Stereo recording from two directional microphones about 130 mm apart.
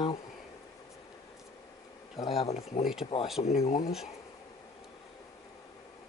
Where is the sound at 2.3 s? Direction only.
45° left (ahead or behind).